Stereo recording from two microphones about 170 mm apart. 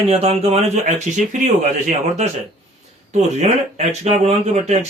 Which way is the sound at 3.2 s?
40° right (ahead or behind).